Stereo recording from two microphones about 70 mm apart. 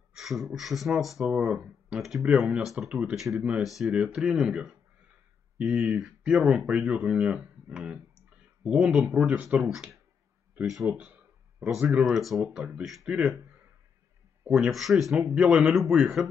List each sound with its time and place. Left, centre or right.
0.1 s speech: centre
2.2 s speech: centre
2.9 s speech: centre
3.6 s speech: centre
5.9 s speech: centre
9.3 s speech: right
9.6 s speech: centre
12.0 s speech: centre
14.5 s speech: centre